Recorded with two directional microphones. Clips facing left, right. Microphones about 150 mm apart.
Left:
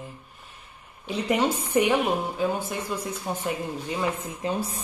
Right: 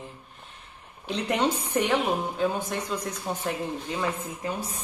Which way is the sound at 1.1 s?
5° left (ahead or behind).